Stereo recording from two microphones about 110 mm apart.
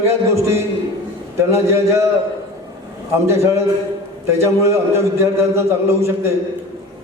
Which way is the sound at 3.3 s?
25° right (ahead or behind).